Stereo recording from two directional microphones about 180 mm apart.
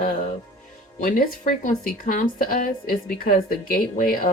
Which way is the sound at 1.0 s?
45° left (ahead or behind).